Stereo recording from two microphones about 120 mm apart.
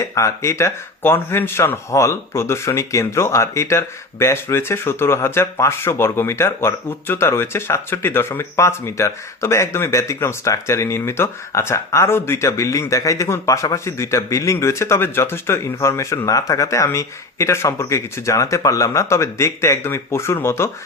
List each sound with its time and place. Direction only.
0.0 s speech: 25° left (ahead or behind)